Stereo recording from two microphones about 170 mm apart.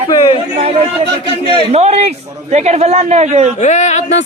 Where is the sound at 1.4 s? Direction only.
35° right (ahead or behind).